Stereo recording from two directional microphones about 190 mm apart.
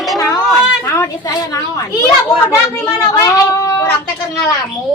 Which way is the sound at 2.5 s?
15° left (ahead or behind).